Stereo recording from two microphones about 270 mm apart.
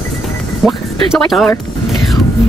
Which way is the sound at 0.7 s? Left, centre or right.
Centre.